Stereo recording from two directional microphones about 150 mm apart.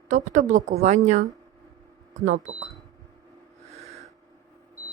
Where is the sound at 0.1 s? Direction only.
55° right (ahead or behind).